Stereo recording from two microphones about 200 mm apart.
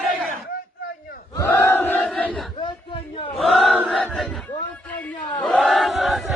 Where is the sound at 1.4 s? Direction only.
10° left (ahead or behind).